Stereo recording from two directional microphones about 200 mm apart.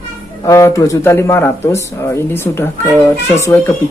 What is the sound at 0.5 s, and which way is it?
Speech, 15° left (ahead or behind).